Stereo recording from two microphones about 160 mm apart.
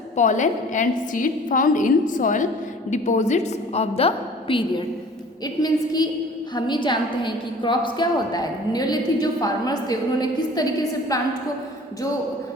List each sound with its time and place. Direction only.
0.2 s a woman's voice: 50° left (ahead or behind)
5.6 s a woman's voice: 25° left (ahead or behind)